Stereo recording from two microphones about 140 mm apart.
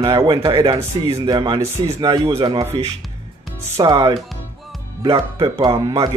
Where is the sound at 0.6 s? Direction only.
20° right (ahead or behind).